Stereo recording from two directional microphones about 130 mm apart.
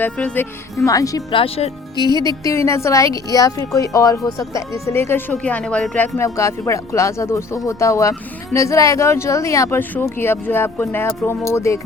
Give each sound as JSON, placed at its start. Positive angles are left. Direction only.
{"t": 0.0, "sound": "speech", "side_deg": 10}
{"t": 0.9, "sound": "speech", "side_deg": 25}
{"t": 1.3, "sound": "speech", "side_deg": 45}
{"t": 2.0, "sound": "music", "side_deg": 30}
{"t": 2.4, "sound": "speech", "side_deg": 25}
{"t": 6.1, "sound": "speech", "side_deg": 20}